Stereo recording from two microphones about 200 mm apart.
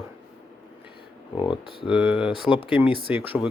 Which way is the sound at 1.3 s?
25° left (ahead or behind).